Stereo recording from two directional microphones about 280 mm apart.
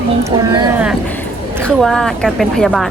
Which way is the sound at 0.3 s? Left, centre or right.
Centre.